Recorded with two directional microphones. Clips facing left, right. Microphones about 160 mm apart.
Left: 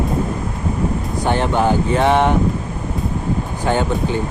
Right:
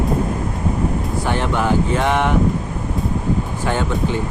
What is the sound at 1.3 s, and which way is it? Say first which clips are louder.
Speech: left 3 dB; 30° left (ahead or behind).